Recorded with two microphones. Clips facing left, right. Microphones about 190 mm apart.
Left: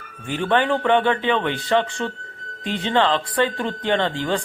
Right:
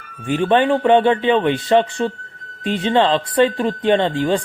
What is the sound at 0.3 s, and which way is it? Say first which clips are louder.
Speech: right 5 dB; 20° right (ahead or behind).